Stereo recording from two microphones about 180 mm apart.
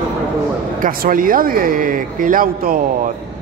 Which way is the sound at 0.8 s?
50° right (ahead or behind).